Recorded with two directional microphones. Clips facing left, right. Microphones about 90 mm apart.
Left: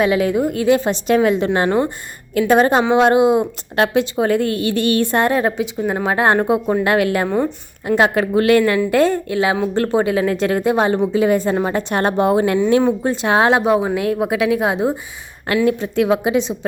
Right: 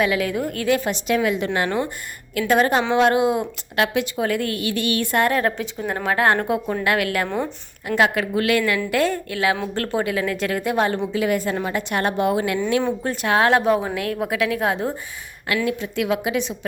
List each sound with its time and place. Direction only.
0.0 s a woman's voice: 25° left (ahead or behind)
1.0 s a woman's voice: 35° left (ahead or behind)
7.3 s speech: 5° left (ahead or behind)
7.9 s a woman's voice: 30° left (ahead or behind)
15.5 s a woman's voice: 35° left (ahead or behind)